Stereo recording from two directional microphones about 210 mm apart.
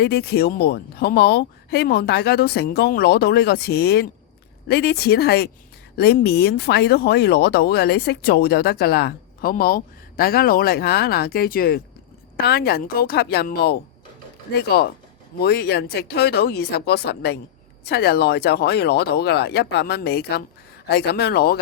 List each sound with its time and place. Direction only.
0.0 s speech: 50° left (ahead or behind)